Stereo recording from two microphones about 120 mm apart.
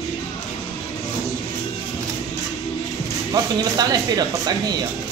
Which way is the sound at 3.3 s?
35° right (ahead or behind).